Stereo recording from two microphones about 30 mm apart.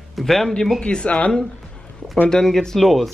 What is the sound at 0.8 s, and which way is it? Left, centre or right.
Speech, left.